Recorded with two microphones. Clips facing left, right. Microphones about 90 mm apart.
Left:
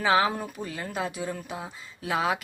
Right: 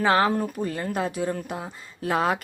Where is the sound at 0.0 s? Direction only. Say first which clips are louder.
Right 2 dB; centre (ahead or behind).